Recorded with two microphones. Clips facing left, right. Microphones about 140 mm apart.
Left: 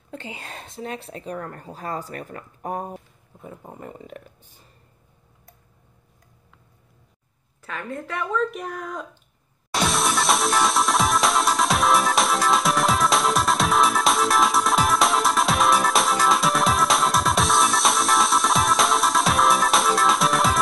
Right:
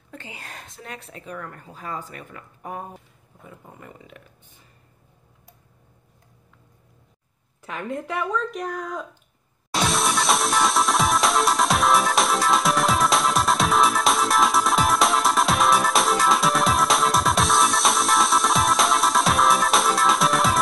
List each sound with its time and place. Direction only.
0.1 s a woman's voice: 25° left (ahead or behind)
7.6 s a woman's voice: 15° right (ahead or behind)
8.2 s speech: 5° left (ahead or behind)
9.7 s music: centre (ahead or behind)